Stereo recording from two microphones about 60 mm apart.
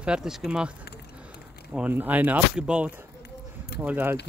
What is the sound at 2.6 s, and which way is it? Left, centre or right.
Speech, centre.